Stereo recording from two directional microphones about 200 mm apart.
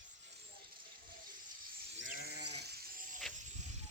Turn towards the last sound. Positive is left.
turn(degrees=-45)  # may be behind; listen again after turning